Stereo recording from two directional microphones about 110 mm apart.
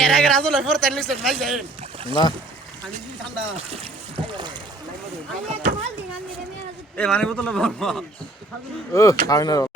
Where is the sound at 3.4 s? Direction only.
65° right (ahead or behind); by 4.6 s 45° right (ahead or behind).